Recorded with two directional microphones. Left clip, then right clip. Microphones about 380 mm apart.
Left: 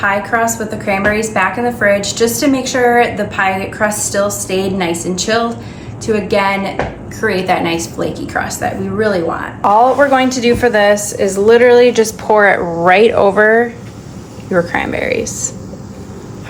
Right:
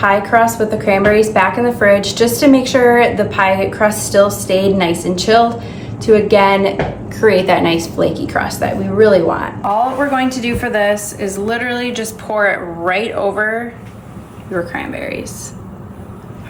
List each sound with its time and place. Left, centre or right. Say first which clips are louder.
0.0 s a woman's voice: right 3 dB; centre
10.1 s a woman's voice: left 5 dB; left
14.7 s a woman's voice: left 6 dB; centre